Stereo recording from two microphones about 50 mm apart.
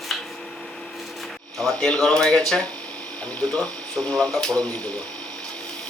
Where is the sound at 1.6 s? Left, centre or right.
Centre.